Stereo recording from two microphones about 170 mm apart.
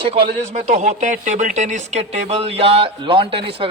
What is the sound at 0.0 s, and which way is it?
A man's voice, 35° right (ahead or behind).